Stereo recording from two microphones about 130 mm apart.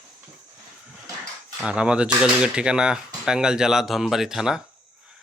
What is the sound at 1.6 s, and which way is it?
Speech, 5° right (ahead or behind).